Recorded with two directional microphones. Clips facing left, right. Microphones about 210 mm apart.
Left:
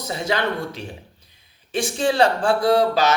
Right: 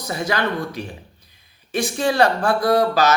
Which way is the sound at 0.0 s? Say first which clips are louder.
Even; 25° left (ahead or behind).